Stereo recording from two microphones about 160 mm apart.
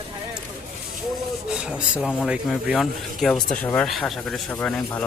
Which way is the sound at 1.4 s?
5° right (ahead or behind).